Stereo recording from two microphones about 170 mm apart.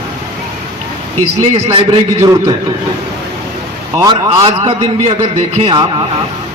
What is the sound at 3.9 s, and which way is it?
A man's voice, 20° right (ahead or behind).